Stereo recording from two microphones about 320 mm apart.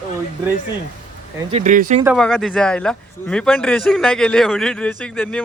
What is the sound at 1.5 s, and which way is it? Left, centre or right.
Speech, right.